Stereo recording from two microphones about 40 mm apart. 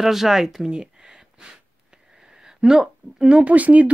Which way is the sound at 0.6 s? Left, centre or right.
Centre.